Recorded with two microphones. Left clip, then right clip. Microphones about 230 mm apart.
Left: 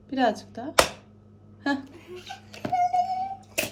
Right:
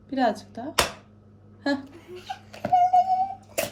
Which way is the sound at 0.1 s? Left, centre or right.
Centre.